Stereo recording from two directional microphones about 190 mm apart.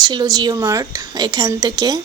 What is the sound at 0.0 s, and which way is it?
A woman's voice, 20° right (ahead or behind).